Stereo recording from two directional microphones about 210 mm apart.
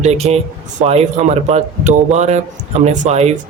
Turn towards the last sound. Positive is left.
turn(degrees=-30)  # may be behind; listen again after turning